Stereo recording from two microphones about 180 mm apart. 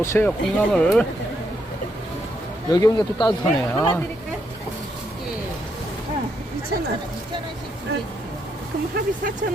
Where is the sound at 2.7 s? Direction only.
25° left (ahead or behind).